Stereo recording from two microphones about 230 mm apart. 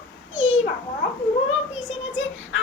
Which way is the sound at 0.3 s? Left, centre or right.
Left.